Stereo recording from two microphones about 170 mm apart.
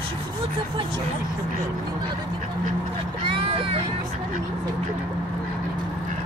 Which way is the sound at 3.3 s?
30° right (ahead or behind).